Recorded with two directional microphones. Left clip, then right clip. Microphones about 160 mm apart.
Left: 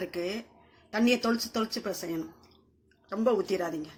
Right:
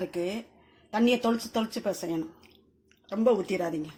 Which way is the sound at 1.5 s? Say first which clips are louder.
Right 2 dB; 35° right (ahead or behind).